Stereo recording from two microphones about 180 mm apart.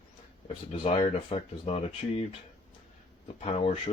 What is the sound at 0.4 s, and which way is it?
Speech, 35° left (ahead or behind).